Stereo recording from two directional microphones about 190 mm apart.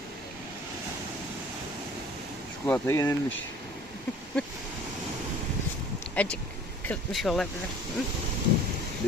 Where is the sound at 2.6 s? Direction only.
10° left (ahead or behind).